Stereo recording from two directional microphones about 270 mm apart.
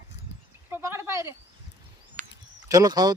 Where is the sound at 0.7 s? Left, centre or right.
Centre.